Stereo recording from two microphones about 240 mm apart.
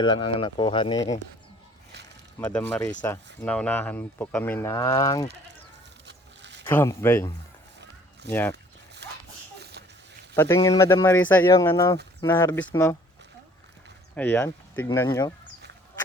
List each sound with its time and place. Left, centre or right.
0.0 s speech: centre
2.4 s speech: centre
6.1 s a sound: right
6.7 s speech: centre
9.0 s dog: right
10.3 s speech: centre
14.2 s speech: centre